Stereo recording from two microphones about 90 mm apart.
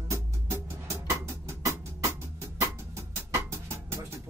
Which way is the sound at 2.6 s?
35° right (ahead or behind).